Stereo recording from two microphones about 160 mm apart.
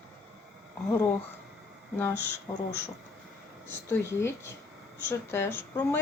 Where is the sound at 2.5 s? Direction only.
25° left (ahead or behind).